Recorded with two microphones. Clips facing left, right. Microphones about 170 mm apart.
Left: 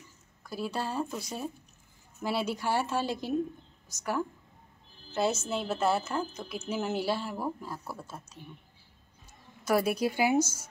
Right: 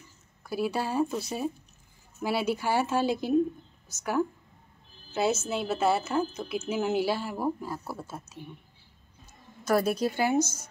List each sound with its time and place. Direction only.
0.4 s speech: 5° right (ahead or behind)
2.2 s a woman's voice: 5° right (ahead or behind)
9.7 s speech: 10° left (ahead or behind)